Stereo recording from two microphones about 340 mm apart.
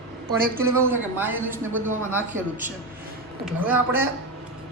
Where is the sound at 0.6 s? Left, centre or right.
Centre.